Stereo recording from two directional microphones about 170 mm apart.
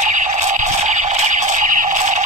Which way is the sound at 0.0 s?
45° right (ahead or behind).